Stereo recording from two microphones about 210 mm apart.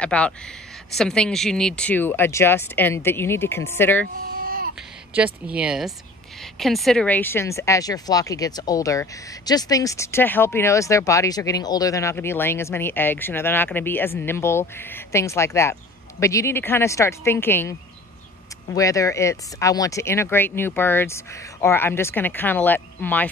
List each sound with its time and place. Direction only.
0.0 s speech: 5° left (ahead or behind)
4.3 s babbling: 45° right (ahead or behind)
5.1 s speech: 5° right (ahead or behind)